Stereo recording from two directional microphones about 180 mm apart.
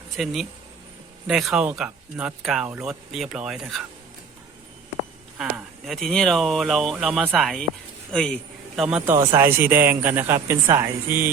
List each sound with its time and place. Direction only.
0.2 s speech: 5° right (ahead or behind)
5.4 s a man's voice: centre (ahead or behind)